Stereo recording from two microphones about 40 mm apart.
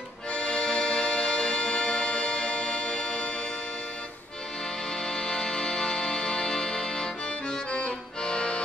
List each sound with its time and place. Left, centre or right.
0.3 s music: left
5.0 s music: centre